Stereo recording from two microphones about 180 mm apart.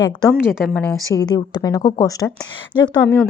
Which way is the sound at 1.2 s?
20° left (ahead or behind).